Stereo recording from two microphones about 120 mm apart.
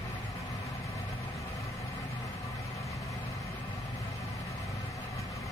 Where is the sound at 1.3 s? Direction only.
25° left (ahead or behind).